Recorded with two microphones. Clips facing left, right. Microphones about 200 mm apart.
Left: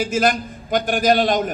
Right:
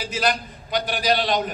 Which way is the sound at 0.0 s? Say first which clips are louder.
Left 6 dB; 50° left (ahead or behind).